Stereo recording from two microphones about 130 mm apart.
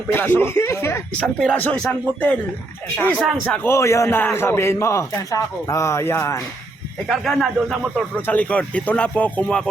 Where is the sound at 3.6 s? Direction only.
20° left (ahead or behind).